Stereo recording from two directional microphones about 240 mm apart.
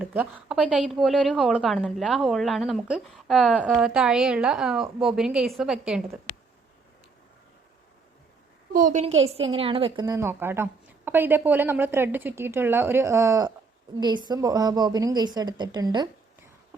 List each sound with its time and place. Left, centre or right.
0.0 s a woman's voice: centre
8.7 s a woman's voice: right; by 16.0 s centre